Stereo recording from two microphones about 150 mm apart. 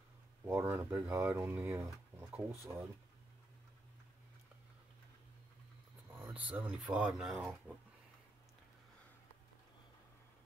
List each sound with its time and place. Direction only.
0.5 s speech: 15° right (ahead or behind)
6.2 s speech: 10° right (ahead or behind)